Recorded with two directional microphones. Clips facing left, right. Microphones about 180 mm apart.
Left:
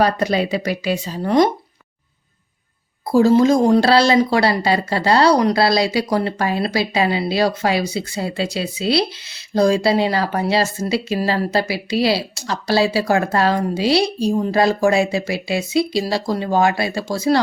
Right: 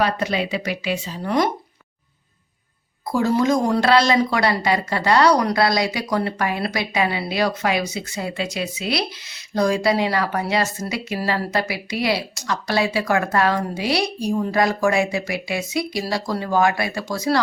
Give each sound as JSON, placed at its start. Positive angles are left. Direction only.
{"t": 0.0, "sound": "speech", "side_deg": 40}
{"t": 3.1, "sound": "speech", "side_deg": 30}